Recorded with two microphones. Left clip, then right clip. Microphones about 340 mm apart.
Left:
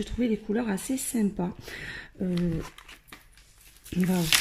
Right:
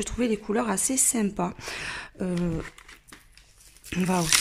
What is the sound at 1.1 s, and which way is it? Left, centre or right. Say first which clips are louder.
Speech: right 2 dB; right.